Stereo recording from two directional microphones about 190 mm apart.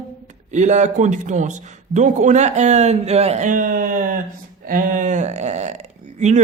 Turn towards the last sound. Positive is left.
turn(degrees=-40)  # may be behind; listen again after turning